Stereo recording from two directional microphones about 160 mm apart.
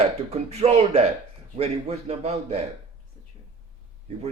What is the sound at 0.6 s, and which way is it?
A man's voice, 35° right (ahead or behind).